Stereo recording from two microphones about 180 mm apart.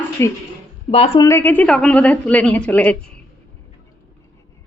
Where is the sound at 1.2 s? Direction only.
15° left (ahead or behind).